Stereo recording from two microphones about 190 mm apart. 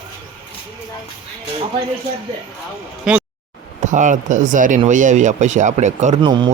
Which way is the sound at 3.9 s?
40° right (ahead or behind).